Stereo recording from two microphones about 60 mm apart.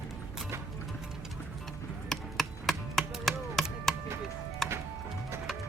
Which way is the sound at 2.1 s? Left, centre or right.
Centre.